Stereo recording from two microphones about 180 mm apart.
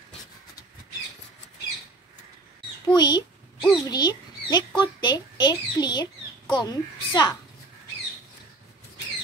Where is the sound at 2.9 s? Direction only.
25° left (ahead or behind).